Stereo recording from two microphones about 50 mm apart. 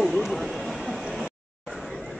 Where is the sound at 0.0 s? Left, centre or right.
Centre.